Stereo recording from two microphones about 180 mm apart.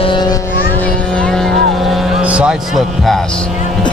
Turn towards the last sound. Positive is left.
turn(degrees=0)  # may be behind; listen again after turning